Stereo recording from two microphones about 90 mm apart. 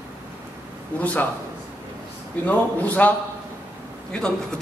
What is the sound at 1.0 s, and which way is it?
Speech, 15° left (ahead or behind).